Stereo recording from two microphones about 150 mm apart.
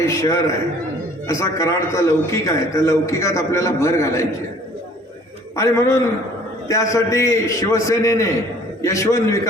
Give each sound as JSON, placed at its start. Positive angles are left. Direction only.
{"t": 0.0, "sound": "a man's voice", "side_deg": 20}
{"t": 5.5, "sound": "a man's voice", "side_deg": 20}